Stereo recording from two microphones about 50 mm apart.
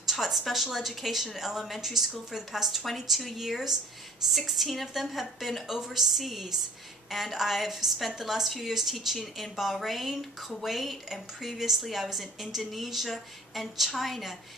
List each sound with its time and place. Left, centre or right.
0.0 s a woman's voice: centre